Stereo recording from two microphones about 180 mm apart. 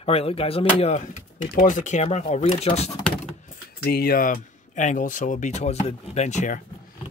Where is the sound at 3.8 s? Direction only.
60° left (ahead or behind); by 6.6 s 40° left (ahead or behind).